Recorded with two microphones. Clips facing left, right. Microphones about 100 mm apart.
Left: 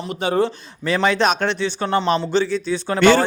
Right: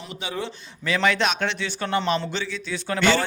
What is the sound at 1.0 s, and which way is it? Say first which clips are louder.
Speech: left 4 dB; 30° left (ahead or behind).